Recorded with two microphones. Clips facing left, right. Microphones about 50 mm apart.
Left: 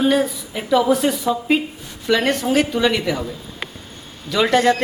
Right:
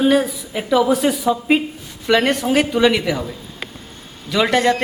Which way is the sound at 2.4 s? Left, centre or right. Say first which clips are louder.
Right 2 dB; centre.